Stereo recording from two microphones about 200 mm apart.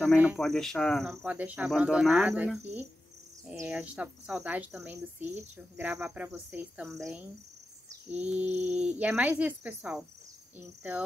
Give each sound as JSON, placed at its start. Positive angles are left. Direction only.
{"t": 0.0, "sound": "speech", "side_deg": -5}
{"t": 8.5, "sound": "a sound", "side_deg": -35}
{"t": 8.7, "sound": "speech", "side_deg": -5}